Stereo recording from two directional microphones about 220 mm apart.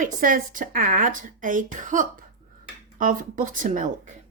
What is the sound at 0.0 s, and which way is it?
Speech, 40° right (ahead or behind).